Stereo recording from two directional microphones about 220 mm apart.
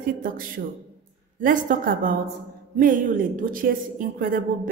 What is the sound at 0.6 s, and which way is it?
A woman's voice, 40° right (ahead or behind).